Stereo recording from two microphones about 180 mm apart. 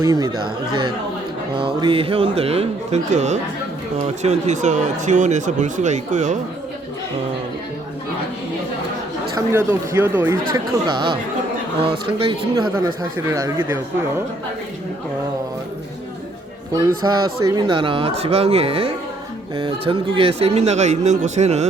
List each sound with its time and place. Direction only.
0.0 s speech: 20° right (ahead or behind); by 6.4 s 40° right (ahead or behind)
9.3 s speech: 15° right (ahead or behind)
10.5 s speech: 25° right (ahead or behind)
17.0 s speech: 20° right (ahead or behind); by 21.7 s 40° right (ahead or behind)